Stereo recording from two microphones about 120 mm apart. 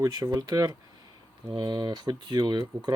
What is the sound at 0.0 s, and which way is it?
Speech, 30° right (ahead or behind).